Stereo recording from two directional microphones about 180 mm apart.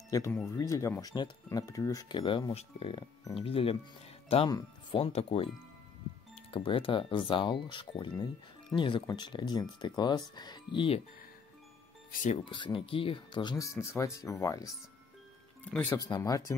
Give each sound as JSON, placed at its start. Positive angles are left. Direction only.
{"t": 0.1, "sound": "speech", "side_deg": 20}
{"t": 4.9, "sound": "speech", "side_deg": 35}
{"t": 6.5, "sound": "speech", "side_deg": 30}
{"t": 12.1, "sound": "speech", "side_deg": 45}
{"t": 12.4, "sound": "speech", "side_deg": 25}